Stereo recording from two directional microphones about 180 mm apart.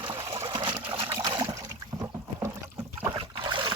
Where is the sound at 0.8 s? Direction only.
25° right (ahead or behind).